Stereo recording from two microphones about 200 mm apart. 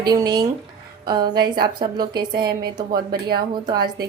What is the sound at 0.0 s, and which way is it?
A woman's voice, 20° right (ahead or behind).